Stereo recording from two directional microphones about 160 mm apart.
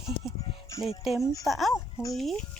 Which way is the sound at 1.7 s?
20° left (ahead or behind).